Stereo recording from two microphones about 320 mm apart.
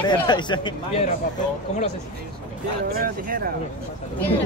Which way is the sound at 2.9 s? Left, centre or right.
Right.